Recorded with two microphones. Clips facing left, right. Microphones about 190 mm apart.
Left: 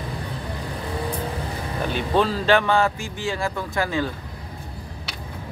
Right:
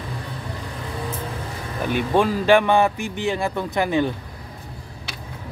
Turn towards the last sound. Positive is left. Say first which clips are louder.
# right 4 dB
turn(degrees=-20)  # may be behind; listen again after turning